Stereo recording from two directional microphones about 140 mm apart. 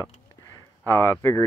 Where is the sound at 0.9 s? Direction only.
15° left (ahead or behind).